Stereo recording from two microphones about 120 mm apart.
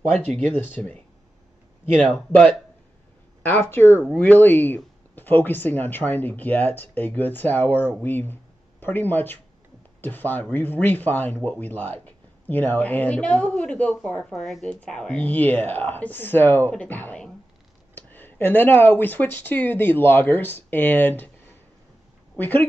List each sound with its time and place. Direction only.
0.1 s speech: 10° left (ahead or behind)
22.4 s speech: 15° left (ahead or behind)